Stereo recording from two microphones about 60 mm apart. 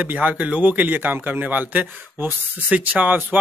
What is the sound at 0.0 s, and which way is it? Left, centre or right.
Speech, right.